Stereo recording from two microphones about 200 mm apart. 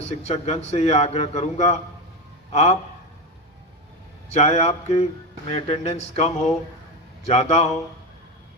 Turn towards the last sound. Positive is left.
turn(degrees=35)  # may be behind; listen again after turning